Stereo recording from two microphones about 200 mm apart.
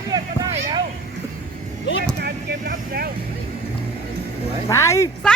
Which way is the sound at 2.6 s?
45° right (ahead or behind).